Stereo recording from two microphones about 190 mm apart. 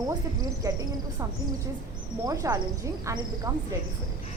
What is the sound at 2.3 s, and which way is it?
A woman's voice, 20° right (ahead or behind).